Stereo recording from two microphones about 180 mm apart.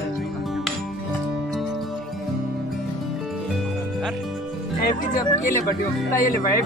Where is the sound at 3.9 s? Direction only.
Centre (ahead or behind).